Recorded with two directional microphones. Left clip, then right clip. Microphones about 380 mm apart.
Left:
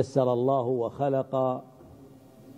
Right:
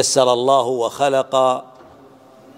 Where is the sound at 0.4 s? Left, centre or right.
Centre.